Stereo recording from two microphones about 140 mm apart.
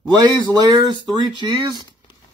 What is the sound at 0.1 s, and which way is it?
A man's voice, 30° right (ahead or behind).